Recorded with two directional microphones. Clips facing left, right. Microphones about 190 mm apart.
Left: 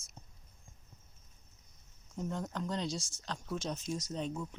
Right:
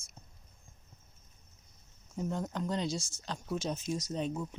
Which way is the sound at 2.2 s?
5° right (ahead or behind).